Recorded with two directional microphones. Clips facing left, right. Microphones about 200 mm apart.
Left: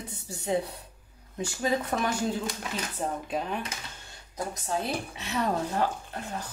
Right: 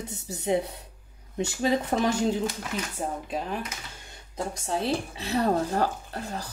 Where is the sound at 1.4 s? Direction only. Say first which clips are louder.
Right 3 dB; 25° right (ahead or behind).